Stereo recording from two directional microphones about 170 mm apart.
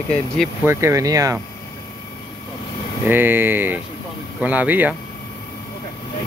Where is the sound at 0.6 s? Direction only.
15° right (ahead or behind).